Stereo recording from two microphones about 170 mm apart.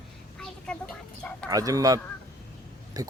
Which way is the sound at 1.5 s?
20° right (ahead or behind).